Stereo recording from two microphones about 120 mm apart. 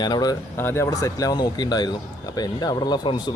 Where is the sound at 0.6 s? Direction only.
20° left (ahead or behind).